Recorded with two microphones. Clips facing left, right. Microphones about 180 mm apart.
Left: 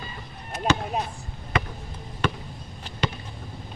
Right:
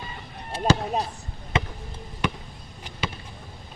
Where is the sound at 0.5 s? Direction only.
35° right (ahead or behind).